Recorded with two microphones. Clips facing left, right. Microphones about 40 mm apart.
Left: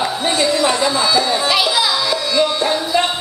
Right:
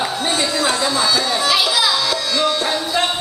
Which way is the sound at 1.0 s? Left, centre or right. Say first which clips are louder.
Left 2 dB; centre.